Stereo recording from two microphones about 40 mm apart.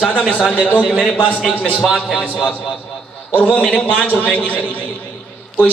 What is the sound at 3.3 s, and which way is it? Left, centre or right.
A man's voice, left.